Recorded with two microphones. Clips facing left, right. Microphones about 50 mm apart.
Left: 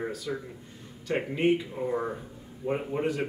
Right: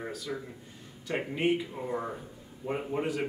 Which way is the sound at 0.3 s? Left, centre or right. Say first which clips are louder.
Left 3 dB; centre.